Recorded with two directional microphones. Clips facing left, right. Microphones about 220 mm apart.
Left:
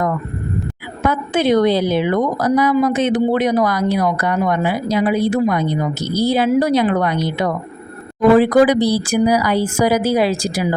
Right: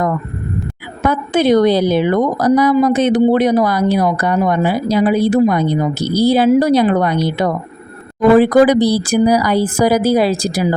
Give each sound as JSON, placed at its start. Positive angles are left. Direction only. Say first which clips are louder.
{"t": 1.0, "sound": "speech", "louder": "right 3 dB", "side_deg": -40}